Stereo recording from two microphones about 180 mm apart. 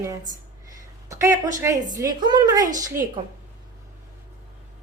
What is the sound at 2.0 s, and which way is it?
Speech, 25° right (ahead or behind).